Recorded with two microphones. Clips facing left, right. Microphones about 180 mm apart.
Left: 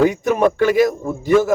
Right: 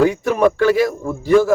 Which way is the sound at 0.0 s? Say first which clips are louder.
Even; 20° left (ahead or behind).